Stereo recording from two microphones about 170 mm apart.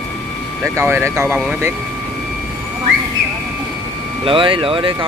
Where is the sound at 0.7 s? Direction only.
15° right (ahead or behind).